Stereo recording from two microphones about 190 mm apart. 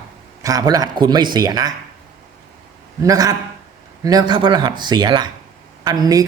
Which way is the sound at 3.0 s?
20° right (ahead or behind).